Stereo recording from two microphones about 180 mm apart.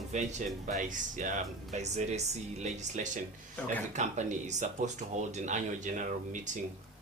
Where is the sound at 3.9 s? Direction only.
40° right (ahead or behind).